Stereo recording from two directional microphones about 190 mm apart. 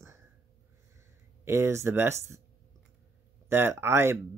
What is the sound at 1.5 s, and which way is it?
Speech, 15° right (ahead or behind).